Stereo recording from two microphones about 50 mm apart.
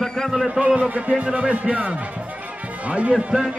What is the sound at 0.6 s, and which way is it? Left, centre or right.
Speech, right.